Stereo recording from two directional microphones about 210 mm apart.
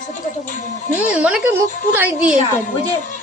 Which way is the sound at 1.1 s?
5° right (ahead or behind).